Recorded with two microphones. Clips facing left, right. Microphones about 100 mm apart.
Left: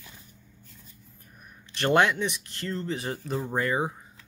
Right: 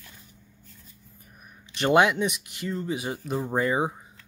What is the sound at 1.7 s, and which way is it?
Speech, 15° right (ahead or behind).